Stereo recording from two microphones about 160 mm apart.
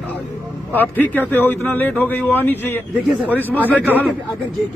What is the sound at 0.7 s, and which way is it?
A man's voice, 10° left (ahead or behind).